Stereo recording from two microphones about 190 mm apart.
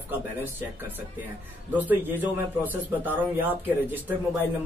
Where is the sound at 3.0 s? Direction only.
10° right (ahead or behind).